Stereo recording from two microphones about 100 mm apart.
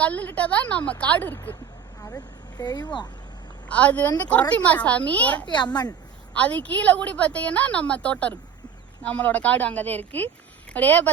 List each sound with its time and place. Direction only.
0.0 s a woman's voice: 15° left (ahead or behind)
2.0 s speech: 40° left (ahead or behind)
3.7 s a woman's voice: 15° left (ahead or behind)
5.5 s speech: 45° left (ahead or behind)
6.3 s a woman's voice: 15° left (ahead or behind)